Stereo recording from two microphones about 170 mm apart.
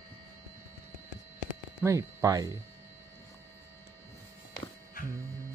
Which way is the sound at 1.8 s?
15° right (ahead or behind).